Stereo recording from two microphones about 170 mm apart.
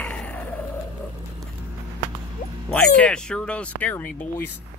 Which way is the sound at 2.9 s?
5° left (ahead or behind).